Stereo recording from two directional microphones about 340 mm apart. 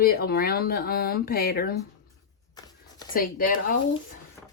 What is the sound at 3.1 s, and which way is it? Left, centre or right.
Speech, left.